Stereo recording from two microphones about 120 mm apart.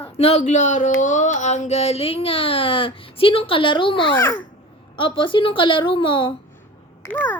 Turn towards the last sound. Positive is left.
turn(degrees=15)  # may be behind; listen again after turning